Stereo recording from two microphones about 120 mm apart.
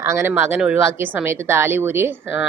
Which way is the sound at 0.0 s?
20° right (ahead or behind).